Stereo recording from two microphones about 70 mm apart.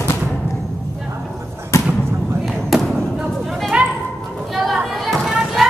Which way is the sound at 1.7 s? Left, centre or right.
Left.